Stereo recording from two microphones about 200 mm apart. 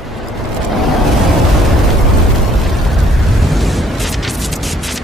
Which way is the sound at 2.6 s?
Centre (ahead or behind).